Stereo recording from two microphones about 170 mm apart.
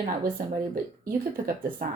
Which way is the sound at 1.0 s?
55° right (ahead or behind).